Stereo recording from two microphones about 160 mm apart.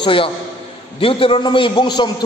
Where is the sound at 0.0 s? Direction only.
35° left (ahead or behind).